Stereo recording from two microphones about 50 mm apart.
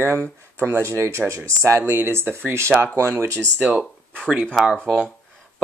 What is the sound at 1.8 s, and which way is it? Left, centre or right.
Speech, right.